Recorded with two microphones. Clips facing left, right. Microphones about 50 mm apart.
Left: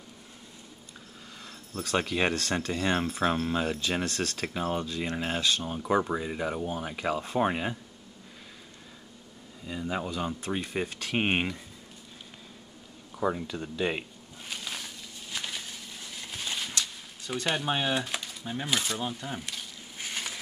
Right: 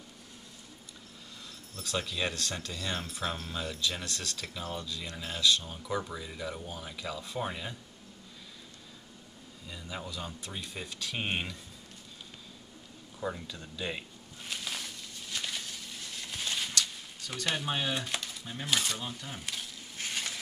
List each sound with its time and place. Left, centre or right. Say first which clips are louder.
1.8 s speech: left 6 dB; left
9.7 s speech: left 9 dB; left
13.5 s speech: left 7 dB; left
14.5 s a sound: left 1 dB; centre
17.5 s speech: left 4 dB; centre
20.0 s a sound: left 1 dB; centre